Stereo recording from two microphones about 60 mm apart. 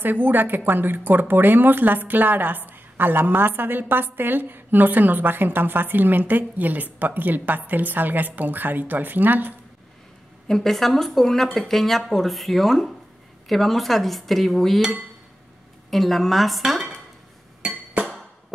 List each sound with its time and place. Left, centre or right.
0.0 s speech: right
10.5 s speech: centre
17.6 s music: centre